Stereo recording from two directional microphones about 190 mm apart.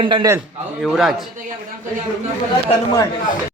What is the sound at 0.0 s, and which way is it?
Speech, 25° right (ahead or behind).